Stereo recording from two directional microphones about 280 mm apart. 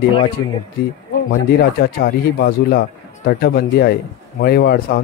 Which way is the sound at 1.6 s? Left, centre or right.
Left.